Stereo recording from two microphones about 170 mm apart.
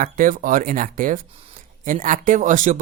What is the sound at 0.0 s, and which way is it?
Speech, 50° right (ahead or behind).